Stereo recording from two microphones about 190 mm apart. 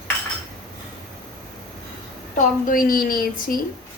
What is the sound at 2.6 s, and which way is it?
Speech, 50° left (ahead or behind).